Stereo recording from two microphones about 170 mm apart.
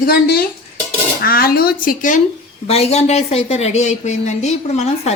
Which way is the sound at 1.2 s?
60° left (ahead or behind).